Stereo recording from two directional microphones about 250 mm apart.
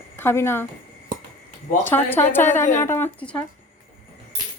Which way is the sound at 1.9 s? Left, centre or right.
Centre.